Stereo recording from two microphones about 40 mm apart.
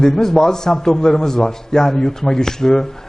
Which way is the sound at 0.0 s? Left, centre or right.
Centre.